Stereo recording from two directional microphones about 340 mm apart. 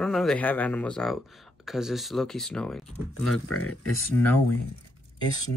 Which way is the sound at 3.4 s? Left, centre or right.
Left.